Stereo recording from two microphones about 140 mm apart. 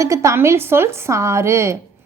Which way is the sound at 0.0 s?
20° right (ahead or behind).